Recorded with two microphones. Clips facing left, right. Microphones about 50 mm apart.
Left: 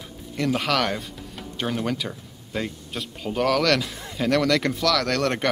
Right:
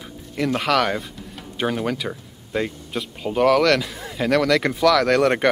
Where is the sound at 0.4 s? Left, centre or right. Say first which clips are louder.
Right 3 dB; centre.